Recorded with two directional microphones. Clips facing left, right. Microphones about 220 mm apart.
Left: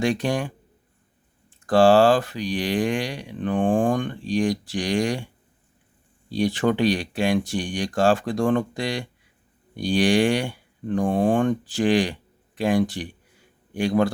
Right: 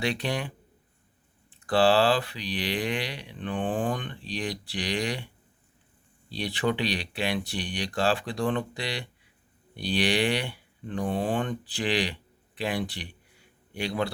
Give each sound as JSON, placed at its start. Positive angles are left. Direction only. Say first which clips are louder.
{"t": 0.0, "sound": "speech", "louder": "left 6 dB", "side_deg": 45}